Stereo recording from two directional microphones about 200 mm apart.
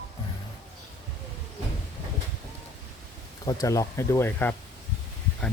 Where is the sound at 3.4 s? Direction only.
20° left (ahead or behind).